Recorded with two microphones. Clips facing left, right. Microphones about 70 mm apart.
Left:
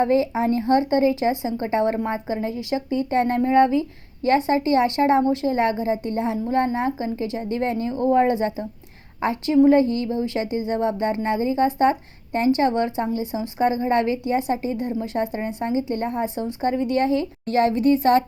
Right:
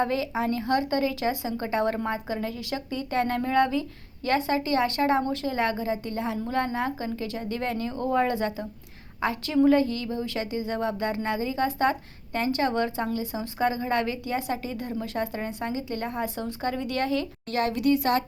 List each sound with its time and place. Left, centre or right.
0.0 s speech: left